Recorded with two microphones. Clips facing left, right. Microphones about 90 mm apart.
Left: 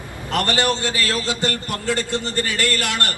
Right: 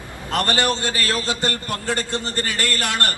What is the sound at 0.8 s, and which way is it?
Speech, 20° left (ahead or behind).